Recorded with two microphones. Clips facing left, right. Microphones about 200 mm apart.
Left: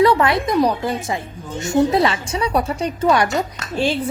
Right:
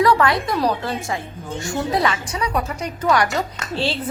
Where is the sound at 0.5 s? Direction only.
15° left (ahead or behind).